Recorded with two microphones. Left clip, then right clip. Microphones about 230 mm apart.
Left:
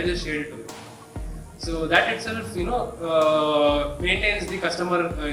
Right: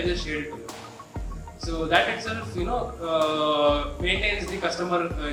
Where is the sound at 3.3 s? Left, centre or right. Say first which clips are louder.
Left 2 dB; left.